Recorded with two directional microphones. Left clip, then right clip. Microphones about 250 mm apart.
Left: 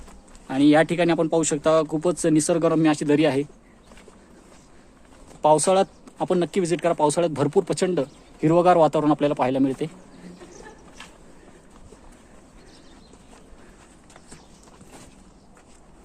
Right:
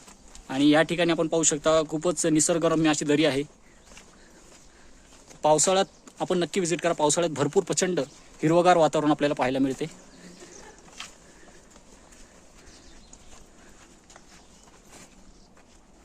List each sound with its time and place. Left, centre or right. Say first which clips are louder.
0.4 s speech: left 3 dB; centre
5.4 s speech: left 4 dB; centre